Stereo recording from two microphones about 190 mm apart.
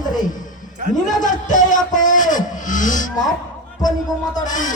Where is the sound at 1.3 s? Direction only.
40° left (ahead or behind).